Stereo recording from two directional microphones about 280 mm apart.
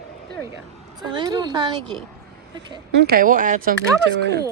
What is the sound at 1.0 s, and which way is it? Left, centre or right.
Speech, centre.